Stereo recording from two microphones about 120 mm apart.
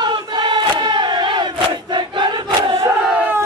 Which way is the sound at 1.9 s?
40° right (ahead or behind).